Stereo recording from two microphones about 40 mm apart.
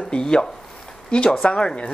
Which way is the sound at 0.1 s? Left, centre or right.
Centre.